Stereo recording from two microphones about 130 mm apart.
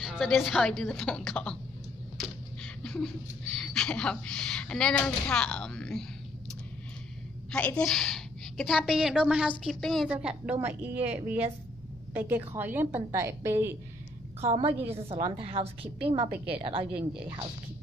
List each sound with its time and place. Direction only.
0.0 s a woman's voice: centre (ahead or behind)
2.1 s a sound: 5° left (ahead or behind)
3.5 s a woman's voice: 5° left (ahead or behind)
7.5 s a woman's voice: 10° left (ahead or behind)
10.0 s a woman's voice: 10° right (ahead or behind)
11.0 s speech: 55° right (ahead or behind)
12.1 s a woman's voice: 15° right (ahead or behind)
14.4 s a woman's voice: 50° right (ahead or behind)